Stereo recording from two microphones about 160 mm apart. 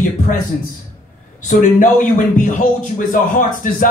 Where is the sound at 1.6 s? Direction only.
55° left (ahead or behind).